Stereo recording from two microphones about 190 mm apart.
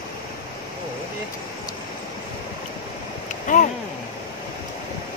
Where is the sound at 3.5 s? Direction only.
40° left (ahead or behind).